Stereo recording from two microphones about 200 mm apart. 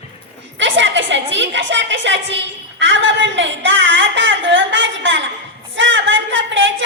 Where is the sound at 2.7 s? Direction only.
65° right (ahead or behind).